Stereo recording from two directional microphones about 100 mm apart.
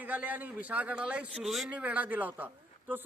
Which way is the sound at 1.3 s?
Centre (ahead or behind).